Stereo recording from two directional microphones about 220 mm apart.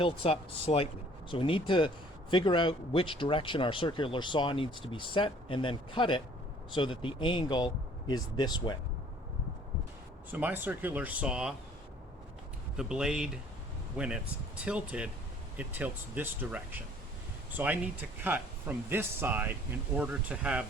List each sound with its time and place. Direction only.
0.0 s speech: 25° left (ahead or behind)
10.3 s speech: 10° right (ahead or behind)
12.7 s speech: 5° right (ahead or behind)